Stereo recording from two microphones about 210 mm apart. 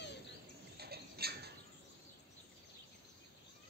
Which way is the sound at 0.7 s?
50° right (ahead or behind).